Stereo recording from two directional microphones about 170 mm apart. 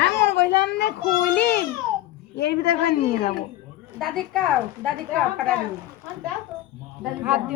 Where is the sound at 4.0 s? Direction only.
Centre (ahead or behind).